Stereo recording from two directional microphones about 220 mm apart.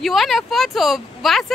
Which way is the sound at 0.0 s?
Centre (ahead or behind).